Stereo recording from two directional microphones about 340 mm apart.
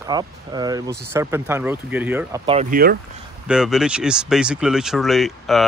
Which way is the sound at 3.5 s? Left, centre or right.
Centre.